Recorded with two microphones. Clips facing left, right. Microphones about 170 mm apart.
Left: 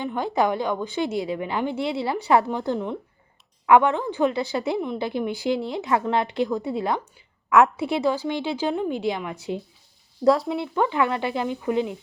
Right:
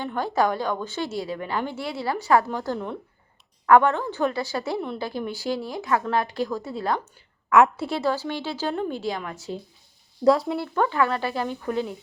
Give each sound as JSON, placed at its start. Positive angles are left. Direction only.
{"t": 0.0, "sound": "a woman's voice", "side_deg": 15}
{"t": 7.5, "sound": "a woman's voice", "side_deg": 0}
{"t": 7.9, "sound": "speech", "side_deg": 15}
{"t": 10.2, "sound": "a woman's voice", "side_deg": 0}
{"t": 10.6, "sound": "speech", "side_deg": 15}